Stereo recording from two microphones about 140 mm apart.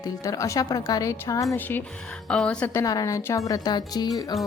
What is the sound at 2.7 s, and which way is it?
A woman's voice, 25° left (ahead or behind).